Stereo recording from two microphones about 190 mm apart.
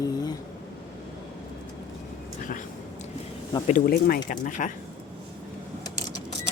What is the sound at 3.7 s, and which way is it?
Speech, 50° left (ahead or behind).